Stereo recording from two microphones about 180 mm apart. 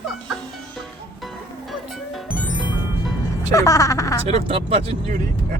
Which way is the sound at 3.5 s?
20° left (ahead or behind).